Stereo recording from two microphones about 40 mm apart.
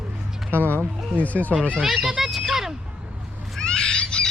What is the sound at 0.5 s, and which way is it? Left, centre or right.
Speech, right.